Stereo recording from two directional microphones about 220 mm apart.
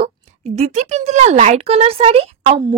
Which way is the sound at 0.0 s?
30° right (ahead or behind).